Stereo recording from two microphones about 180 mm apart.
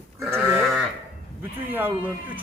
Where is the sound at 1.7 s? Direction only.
10° right (ahead or behind).